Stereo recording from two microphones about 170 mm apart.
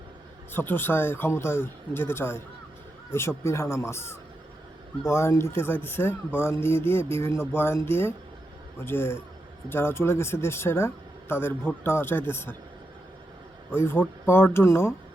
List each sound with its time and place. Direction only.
0.5 s a man's voice: 10° left (ahead or behind)
13.7 s a man's voice: 15° left (ahead or behind)